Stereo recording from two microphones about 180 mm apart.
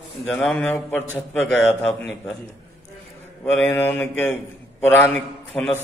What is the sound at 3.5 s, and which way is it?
A man's voice, 10° left (ahead or behind).